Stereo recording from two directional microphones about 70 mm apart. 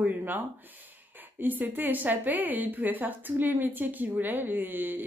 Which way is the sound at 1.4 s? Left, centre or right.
Right.